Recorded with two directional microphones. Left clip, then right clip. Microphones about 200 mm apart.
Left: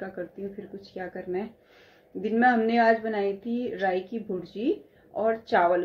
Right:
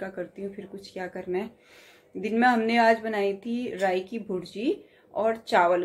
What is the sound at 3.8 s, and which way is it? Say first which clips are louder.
A woman's voice: right 2 dB; centre (ahead or behind).